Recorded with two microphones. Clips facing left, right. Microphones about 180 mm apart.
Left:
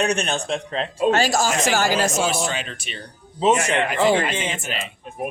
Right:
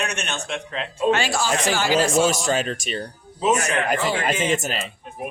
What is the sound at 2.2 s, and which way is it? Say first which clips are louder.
Speech: right 3 dB; 45° right (ahead or behind).